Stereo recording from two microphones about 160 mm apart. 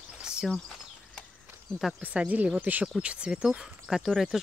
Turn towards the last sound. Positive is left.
turn(degrees=0)  # may be behind; listen again after turning